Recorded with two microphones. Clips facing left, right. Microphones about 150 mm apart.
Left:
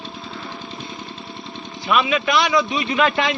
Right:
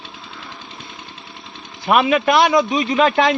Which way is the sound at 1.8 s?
50° right (ahead or behind).